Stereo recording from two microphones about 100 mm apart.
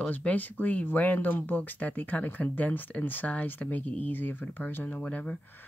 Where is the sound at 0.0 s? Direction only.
15° left (ahead or behind).